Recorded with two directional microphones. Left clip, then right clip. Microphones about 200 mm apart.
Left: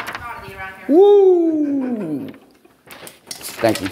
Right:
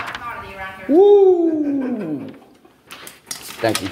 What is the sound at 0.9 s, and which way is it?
Speech, 30° left (ahead or behind).